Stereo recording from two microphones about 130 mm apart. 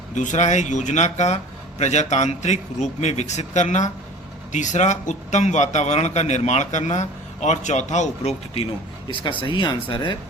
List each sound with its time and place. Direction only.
0.1 s a man's voice: 70° left (ahead or behind); by 8.6 s 55° left (ahead or behind)
9.4 s speech: 35° left (ahead or behind)